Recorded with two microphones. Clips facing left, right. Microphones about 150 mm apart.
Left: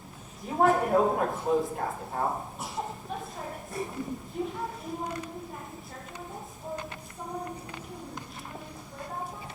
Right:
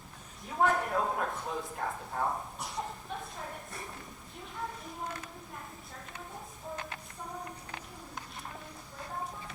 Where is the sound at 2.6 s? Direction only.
Centre (ahead or behind).